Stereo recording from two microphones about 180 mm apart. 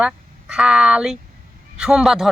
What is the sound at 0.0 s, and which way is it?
Speech, 5° right (ahead or behind).